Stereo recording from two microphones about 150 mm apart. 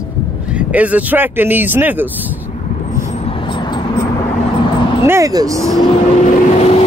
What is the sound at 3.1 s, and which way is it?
Vehicle, 35° left (ahead or behind).